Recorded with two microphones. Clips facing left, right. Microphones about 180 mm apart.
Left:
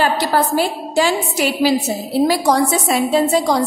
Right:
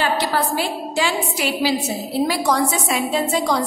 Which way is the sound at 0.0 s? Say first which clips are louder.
Left 4 dB; 40° left (ahead or behind).